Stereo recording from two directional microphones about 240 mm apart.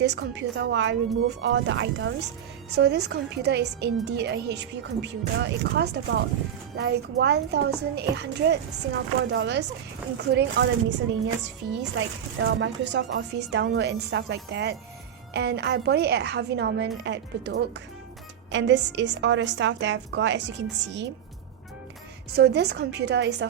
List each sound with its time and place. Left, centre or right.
0.0 s a woman's voice: right
22.4 s a woman's voice: right